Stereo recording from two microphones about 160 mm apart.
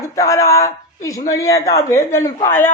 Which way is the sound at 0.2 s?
20° left (ahead or behind).